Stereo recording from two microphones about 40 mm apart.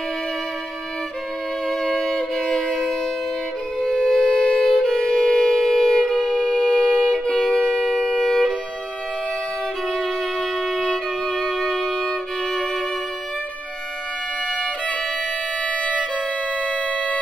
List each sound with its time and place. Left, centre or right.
1.7 s music: centre
3.8 s shofar: centre
4.6 s violin: centre
6.0 s music: centre
7.2 s wind instrument: left
8.2 s music: centre
11.2 s violin: centre
15.6 s music: left
16.6 s siren: left